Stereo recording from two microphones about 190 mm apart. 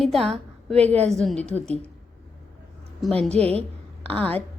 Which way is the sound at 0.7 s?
35° right (ahead or behind).